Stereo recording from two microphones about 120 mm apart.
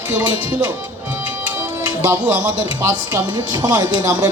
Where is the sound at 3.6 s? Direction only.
30° right (ahead or behind).